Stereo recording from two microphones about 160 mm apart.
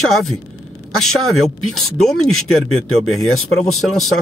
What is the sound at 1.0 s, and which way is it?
Speech, centre (ahead or behind).